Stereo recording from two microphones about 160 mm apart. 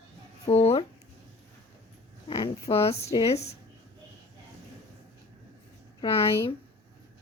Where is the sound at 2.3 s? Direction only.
35° left (ahead or behind).